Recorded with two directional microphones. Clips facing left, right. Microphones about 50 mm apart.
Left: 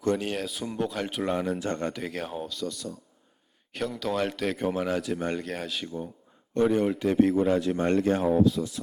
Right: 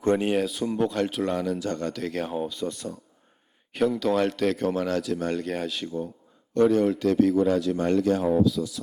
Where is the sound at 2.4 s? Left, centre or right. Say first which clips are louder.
Right 4 dB; right.